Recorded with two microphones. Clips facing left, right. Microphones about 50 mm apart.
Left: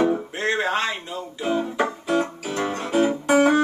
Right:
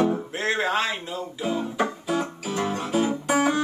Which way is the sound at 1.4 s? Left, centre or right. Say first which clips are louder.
Left 3 dB; centre.